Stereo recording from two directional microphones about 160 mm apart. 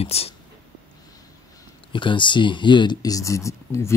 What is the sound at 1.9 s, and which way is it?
Speech, 30° left (ahead or behind).